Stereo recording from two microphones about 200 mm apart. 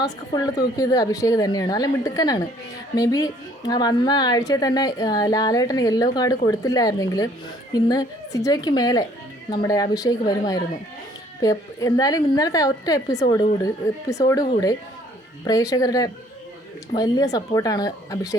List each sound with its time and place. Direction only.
0.0 s a woman's voice: 20° left (ahead or behind)